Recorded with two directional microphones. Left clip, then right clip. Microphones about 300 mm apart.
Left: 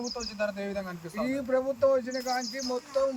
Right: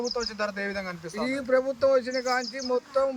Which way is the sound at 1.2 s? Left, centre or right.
Centre.